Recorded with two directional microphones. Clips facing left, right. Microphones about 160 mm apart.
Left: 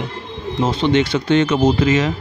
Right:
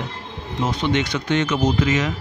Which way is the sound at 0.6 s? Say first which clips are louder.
Left 5 dB; 30° left (ahead or behind).